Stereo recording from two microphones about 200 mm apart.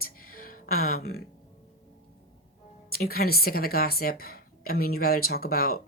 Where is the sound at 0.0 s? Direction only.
45° left (ahead or behind).